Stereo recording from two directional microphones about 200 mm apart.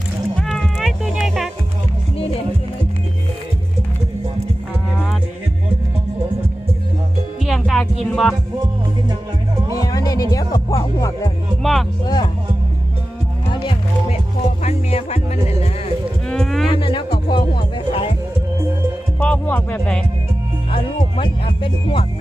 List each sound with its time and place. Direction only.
0.3 s music: centre (ahead or behind)
7.4 s music: centre (ahead or behind)
8.0 s speech: centre (ahead or behind)
9.6 s music: 15° left (ahead or behind)
11.6 s music: centre (ahead or behind)
12.0 s music: 20° left (ahead or behind)
13.5 s music: 25° left (ahead or behind)
16.3 s a sound: centre (ahead or behind)
16.7 s music: 25° left (ahead or behind)
19.2 s music: 10° left (ahead or behind)
20.7 s speech: 25° left (ahead or behind)